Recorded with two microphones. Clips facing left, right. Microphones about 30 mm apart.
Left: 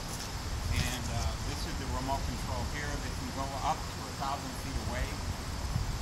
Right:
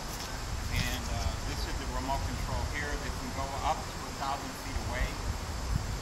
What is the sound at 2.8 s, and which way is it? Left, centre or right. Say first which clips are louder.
Speech: right 2 dB; centre.